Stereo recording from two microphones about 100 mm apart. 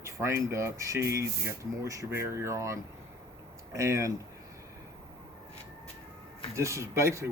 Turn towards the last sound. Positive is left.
turn(degrees=-30)  # may be behind; listen again after turning